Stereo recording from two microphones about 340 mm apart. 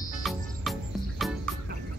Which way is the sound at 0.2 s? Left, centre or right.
Centre.